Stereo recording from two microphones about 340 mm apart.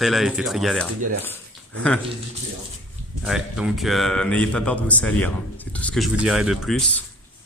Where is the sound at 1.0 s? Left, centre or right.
Right.